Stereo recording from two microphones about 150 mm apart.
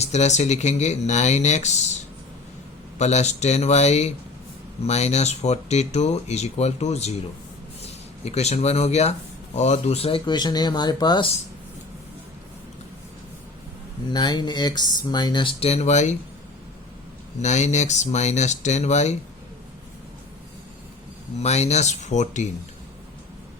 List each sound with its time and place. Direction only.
0.0 s speech: 50° left (ahead or behind)
3.0 s speech: 50° left (ahead or behind); by 11.3 s 30° left (ahead or behind)
14.1 s speech: 30° left (ahead or behind); by 16.1 s 50° left (ahead or behind)
17.4 s speech: 50° left (ahead or behind)
21.4 s speech: 45° left (ahead or behind)